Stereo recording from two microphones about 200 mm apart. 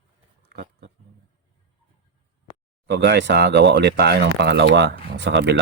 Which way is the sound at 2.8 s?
60° right (ahead or behind).